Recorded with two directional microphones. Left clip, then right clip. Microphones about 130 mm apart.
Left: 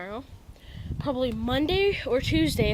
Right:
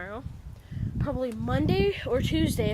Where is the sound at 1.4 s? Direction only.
Centre (ahead or behind).